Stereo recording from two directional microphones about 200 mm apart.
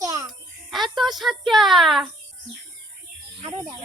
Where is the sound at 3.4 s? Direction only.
25° right (ahead or behind).